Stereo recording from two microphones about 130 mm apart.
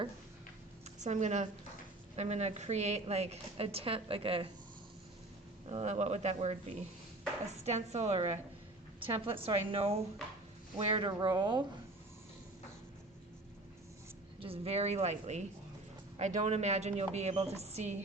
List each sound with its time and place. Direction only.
1.0 s a woman's voice: 65° right (ahead or behind); by 4.5 s 45° right (ahead or behind)
5.6 s a woman's voice: 55° right (ahead or behind)
9.0 s a woman's voice: 45° right (ahead or behind)
11.1 s speech: 30° right (ahead or behind)
14.4 s a woman's voice: 50° right (ahead or behind)